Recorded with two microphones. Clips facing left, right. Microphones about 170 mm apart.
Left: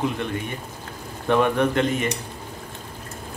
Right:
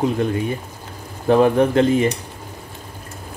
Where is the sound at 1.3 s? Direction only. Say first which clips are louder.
Right 5 dB; 35° right (ahead or behind).